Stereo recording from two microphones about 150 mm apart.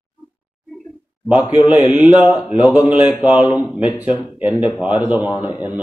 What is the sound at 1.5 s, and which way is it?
Speech, 30° left (ahead or behind).